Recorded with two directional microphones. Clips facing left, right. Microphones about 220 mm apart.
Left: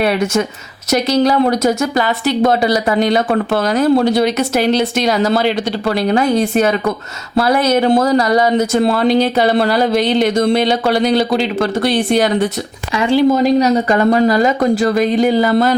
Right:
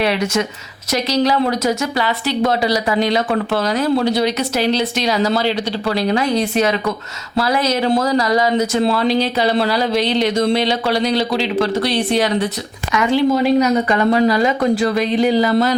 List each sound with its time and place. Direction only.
0.9 s speech: 50° left (ahead or behind)
12.9 s speech: 30° left (ahead or behind); by 15.7 s 50° left (ahead or behind)